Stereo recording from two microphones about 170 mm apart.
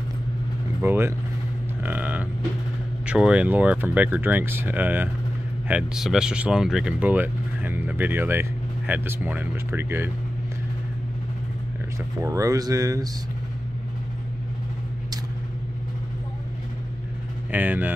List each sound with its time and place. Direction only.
0.8 s speech: 15° right (ahead or behind)
1.8 s livestock: 10° right (ahead or behind)
3.1 s speech: 5° right (ahead or behind)
12.2 s speech: 20° right (ahead or behind)
17.5 s speech: 10° right (ahead or behind)